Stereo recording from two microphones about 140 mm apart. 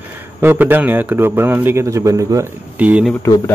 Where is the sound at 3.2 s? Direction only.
20° left (ahead or behind).